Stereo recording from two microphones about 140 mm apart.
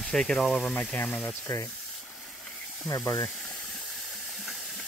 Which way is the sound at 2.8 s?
20° left (ahead or behind).